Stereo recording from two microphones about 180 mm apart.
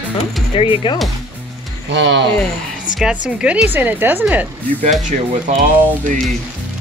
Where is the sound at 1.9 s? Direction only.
75° right (ahead or behind).